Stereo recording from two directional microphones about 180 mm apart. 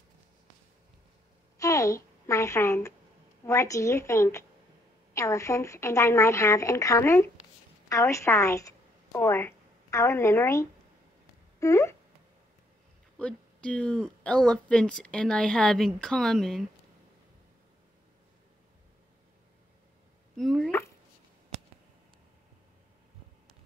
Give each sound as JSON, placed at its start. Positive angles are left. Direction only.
{"t": 1.6, "sound": "a woman's voice", "side_deg": 15}
{"t": 13.2, "sound": "speech", "side_deg": 5}
{"t": 20.3, "sound": "speech", "side_deg": 0}